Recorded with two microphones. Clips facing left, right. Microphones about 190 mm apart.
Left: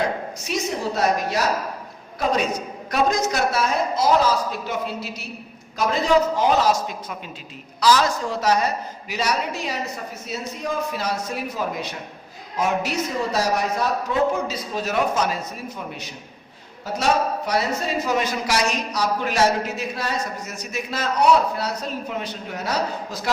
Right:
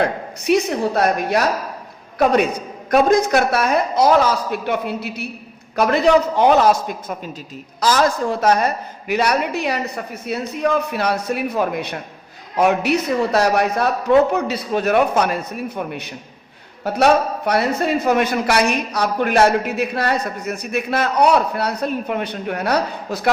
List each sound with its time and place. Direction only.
0.0 s a man's voice: 60° right (ahead or behind)